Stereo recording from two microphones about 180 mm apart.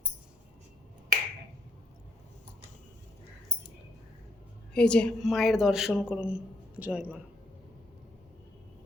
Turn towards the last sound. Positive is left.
turn(degrees=-10)  # may be behind; listen again after turning